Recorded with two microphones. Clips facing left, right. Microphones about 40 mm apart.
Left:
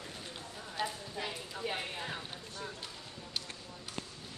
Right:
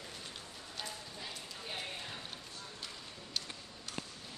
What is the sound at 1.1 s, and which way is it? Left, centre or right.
Clip-clop, left.